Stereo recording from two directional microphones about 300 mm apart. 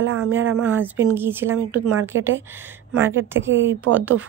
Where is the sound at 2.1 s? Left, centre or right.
Right.